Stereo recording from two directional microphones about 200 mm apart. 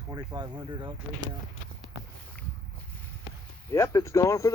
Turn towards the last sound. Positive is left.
turn(degrees=15)  # may be behind; listen again after turning